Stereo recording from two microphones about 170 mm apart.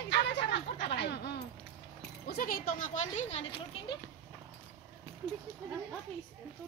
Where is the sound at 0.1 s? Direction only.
90° left.